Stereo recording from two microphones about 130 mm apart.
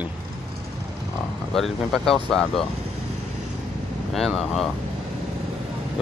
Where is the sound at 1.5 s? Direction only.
5° left (ahead or behind).